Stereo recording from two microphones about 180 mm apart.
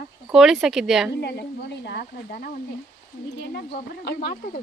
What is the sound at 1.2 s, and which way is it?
A woman's voice, 70° left (ahead or behind).